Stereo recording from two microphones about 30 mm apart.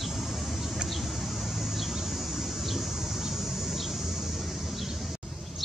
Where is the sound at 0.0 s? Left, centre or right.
Centre.